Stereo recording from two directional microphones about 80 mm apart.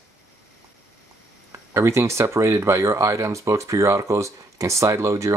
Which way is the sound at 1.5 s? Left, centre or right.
Right.